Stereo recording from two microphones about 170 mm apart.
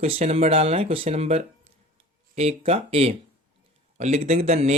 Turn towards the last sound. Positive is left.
turn(degrees=-40)  # may be behind; listen again after turning